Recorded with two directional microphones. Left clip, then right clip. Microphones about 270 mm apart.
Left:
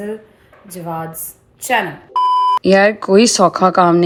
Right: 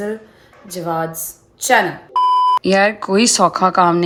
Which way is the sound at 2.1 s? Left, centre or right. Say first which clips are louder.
Even; centre.